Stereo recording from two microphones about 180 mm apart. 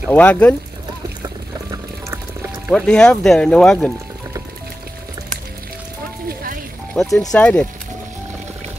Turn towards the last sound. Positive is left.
turn(degrees=5)  # may be behind; listen again after turning